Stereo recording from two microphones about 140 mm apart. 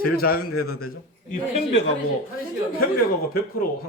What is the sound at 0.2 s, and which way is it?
Speech, 90° left.